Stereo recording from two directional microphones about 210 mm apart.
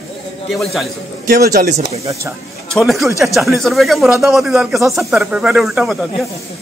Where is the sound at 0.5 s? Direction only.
Centre (ahead or behind).